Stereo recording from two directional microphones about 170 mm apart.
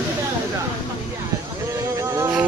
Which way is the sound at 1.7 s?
15° right (ahead or behind).